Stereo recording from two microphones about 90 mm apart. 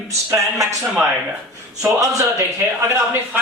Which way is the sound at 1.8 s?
35° right (ahead or behind).